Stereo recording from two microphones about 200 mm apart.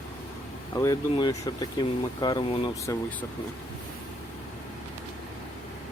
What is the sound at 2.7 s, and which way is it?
Speech, 15° left (ahead or behind).